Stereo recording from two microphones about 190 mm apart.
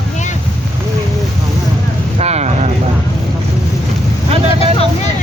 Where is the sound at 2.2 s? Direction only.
35° right (ahead or behind).